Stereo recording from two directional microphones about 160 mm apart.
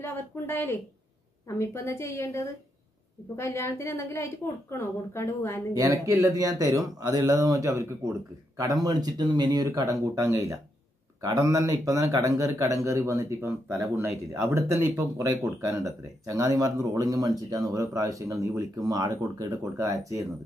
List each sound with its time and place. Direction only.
0.0 s a woman's voice: 15° left (ahead or behind)
5.8 s speech: 20° right (ahead or behind)